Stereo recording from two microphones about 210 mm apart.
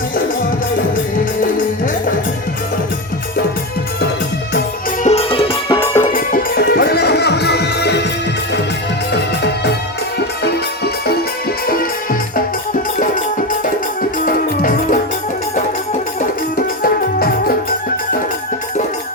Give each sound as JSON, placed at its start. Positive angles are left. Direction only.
{"t": 1.2, "sound": "music", "side_deg": 40}
{"t": 5.0, "sound": "music", "side_deg": 30}
{"t": 5.8, "sound": "music", "side_deg": 10}
{"t": 6.1, "sound": "music", "side_deg": 40}
{"t": 9.1, "sound": "music", "side_deg": 55}
{"t": 14.3, "sound": "music", "side_deg": 40}
{"t": 16.2, "sound": "music", "side_deg": 40}